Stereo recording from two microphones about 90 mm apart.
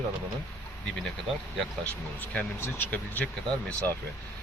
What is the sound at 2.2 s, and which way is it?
Speech, 15° left (ahead or behind).